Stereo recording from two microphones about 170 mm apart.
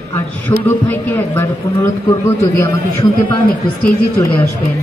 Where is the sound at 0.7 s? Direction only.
15° left (ahead or behind).